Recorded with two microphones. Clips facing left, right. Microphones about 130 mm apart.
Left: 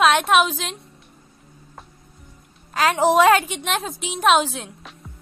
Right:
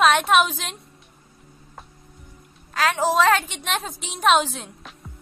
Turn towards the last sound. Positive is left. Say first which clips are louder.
# left 1 dB
turn(degrees=0)  # may be behind; listen again after turning